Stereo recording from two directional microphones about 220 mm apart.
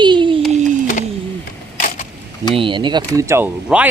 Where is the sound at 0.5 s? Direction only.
35° right (ahead or behind).